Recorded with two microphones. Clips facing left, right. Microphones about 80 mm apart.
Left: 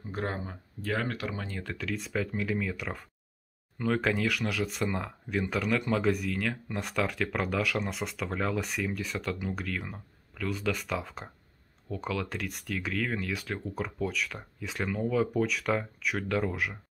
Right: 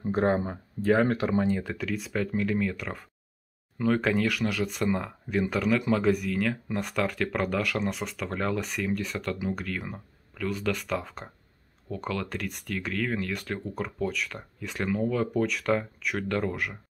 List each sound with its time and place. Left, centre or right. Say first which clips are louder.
0.0 s speech: right 9 dB; right
1.6 s speech: right 3 dB; centre